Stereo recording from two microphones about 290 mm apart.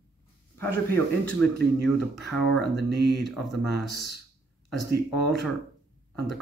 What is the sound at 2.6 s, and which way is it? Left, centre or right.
Speech, right.